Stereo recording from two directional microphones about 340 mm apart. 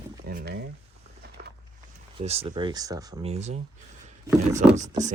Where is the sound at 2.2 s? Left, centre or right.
Centre.